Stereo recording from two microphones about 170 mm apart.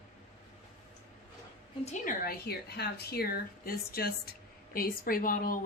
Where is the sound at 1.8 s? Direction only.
50° left (ahead or behind).